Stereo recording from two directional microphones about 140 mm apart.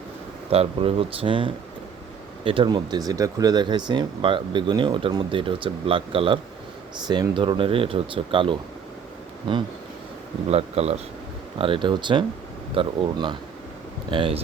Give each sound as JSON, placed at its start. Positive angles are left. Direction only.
{"t": 0.5, "sound": "speech", "side_deg": -45}
{"t": 10.5, "sound": "speech", "side_deg": -50}